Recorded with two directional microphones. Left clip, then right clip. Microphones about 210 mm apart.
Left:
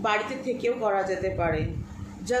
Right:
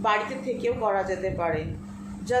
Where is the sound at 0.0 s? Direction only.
5° left (ahead or behind).